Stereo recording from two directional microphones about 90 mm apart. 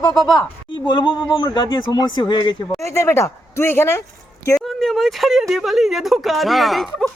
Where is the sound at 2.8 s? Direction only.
30° left (ahead or behind).